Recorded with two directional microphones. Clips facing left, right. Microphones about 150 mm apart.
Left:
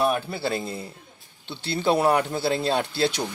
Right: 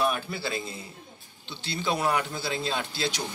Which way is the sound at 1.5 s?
60° left (ahead or behind).